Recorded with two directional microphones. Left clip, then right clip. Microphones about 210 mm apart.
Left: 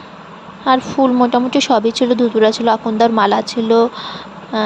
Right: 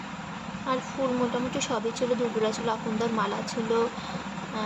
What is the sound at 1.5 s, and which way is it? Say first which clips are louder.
A woman's voice: left 15 dB; 35° left (ahead or behind).